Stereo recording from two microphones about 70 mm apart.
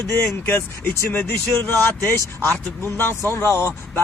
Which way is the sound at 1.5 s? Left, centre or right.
Left.